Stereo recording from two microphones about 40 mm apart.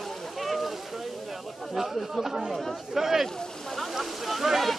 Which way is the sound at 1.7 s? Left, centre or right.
Centre.